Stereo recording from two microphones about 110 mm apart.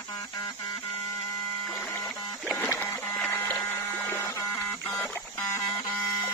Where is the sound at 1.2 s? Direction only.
20° left (ahead or behind).